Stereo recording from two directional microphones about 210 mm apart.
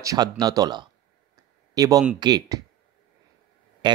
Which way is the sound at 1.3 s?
15° right (ahead or behind).